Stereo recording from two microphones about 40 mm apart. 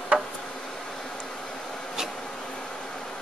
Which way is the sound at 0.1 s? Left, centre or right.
Centre.